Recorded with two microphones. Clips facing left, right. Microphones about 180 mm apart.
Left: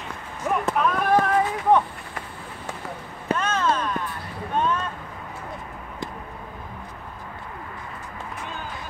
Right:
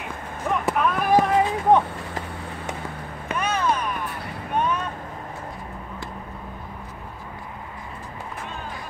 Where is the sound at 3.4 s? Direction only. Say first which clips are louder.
Right 2 dB; 15° right (ahead or behind).